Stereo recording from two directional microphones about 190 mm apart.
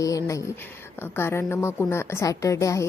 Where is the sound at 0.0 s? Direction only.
15° left (ahead or behind).